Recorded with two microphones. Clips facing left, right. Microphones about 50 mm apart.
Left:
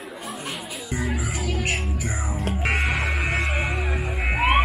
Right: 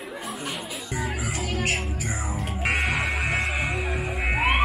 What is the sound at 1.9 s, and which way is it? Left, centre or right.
Music, centre.